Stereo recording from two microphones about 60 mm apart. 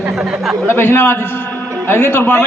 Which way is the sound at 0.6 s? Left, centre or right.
Left.